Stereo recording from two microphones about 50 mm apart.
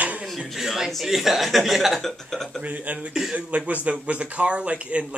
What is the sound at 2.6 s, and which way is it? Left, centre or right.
Speech, right.